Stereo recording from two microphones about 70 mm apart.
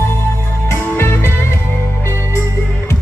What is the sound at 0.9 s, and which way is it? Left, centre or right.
Music, left.